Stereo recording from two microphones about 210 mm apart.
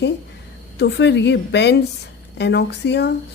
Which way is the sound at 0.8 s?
55° left (ahead or behind).